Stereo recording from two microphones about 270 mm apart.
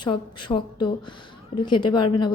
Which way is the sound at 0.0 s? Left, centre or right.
Centre.